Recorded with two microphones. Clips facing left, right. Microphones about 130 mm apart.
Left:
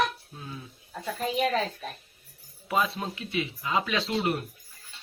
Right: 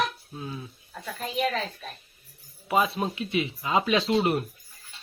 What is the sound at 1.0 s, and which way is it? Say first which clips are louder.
Speech: left 1 dB; 20° left (ahead or behind).